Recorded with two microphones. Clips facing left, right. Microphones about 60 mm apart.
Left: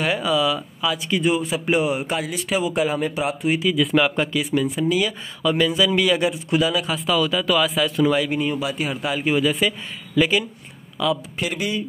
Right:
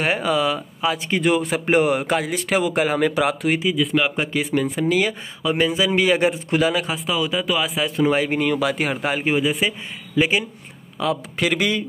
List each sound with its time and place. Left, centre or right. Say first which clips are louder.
0.0 s a man's voice: even; right
1.2 s speech: right 3 dB; right
3.0 s speech: right 4 dB; right
3.7 s speech: left 1 dB; centre
4.3 s speech: even; right
5.4 s a man's voice: left 1 dB; right
6.9 s speech: left 2 dB; centre; by 8.4 s right
8.4 s speech: right 3 dB; right
9.4 s speech: left 1 dB; right
11.3 s speech: right 4 dB; right